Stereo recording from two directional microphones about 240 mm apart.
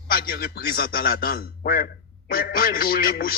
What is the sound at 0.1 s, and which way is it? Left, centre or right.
A man's voice, left.